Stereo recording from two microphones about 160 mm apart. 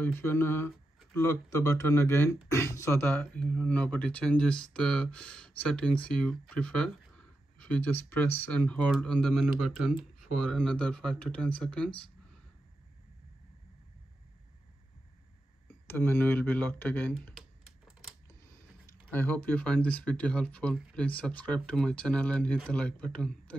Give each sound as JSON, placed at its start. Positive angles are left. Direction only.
{"t": 0.0, "sound": "speech", "side_deg": 15}
{"t": 15.9, "sound": "speech", "side_deg": 15}
{"t": 17.4, "sound": "typing", "side_deg": 0}
{"t": 19.1, "sound": "speech", "side_deg": 10}